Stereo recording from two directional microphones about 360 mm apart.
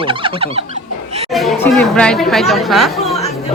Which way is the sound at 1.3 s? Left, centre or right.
Centre.